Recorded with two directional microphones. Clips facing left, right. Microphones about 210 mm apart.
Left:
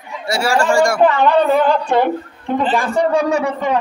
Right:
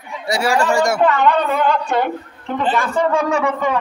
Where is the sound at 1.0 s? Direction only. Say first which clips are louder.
Left 3 dB; 30° left (ahead or behind).